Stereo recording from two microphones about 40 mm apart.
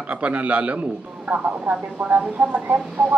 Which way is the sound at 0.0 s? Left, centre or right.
Right.